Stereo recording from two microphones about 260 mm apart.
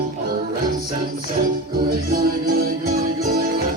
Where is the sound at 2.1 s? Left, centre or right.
Right.